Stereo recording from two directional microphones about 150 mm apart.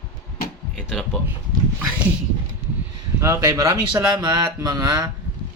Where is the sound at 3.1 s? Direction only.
20° right (ahead or behind).